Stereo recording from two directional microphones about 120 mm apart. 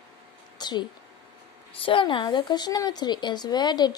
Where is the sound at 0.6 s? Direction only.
40° left (ahead or behind).